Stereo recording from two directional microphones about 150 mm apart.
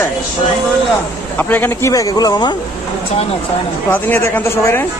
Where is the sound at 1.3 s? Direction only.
15° left (ahead or behind).